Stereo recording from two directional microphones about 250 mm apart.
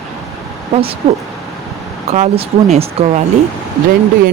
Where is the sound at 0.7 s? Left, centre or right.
Right.